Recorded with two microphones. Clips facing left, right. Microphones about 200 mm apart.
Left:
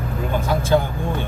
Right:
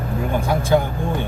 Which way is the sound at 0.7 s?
15° right (ahead or behind).